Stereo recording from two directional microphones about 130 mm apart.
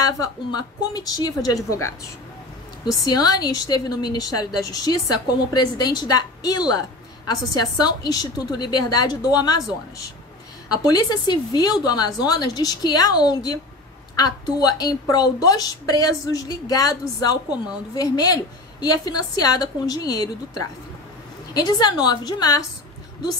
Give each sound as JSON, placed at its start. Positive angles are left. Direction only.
{"t": 0.0, "sound": "a woman's voice", "side_deg": 30}
{"t": 3.2, "sound": "a woman's voice", "side_deg": 30}
{"t": 10.9, "sound": "a woman's voice", "side_deg": 30}
{"t": 21.5, "sound": "a woman's voice", "side_deg": 30}